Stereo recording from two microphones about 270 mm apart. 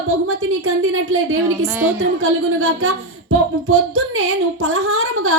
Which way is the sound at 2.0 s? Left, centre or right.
Right.